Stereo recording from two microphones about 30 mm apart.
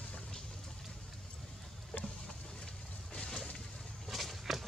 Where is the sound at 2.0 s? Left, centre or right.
Left.